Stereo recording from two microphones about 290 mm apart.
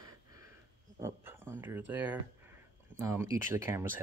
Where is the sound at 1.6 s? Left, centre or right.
Centre.